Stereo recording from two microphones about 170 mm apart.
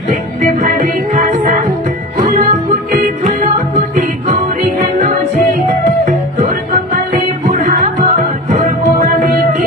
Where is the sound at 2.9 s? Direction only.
50° right (ahead or behind).